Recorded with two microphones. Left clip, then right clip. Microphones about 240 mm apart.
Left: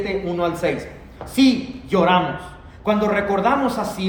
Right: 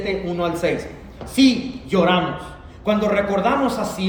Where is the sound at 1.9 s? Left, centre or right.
Left.